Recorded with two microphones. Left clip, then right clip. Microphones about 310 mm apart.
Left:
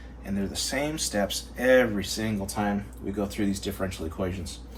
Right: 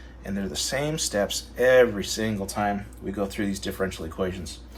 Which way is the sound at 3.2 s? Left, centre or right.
Right.